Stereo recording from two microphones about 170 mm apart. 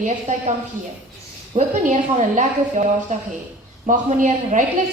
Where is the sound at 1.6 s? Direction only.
45° right (ahead or behind).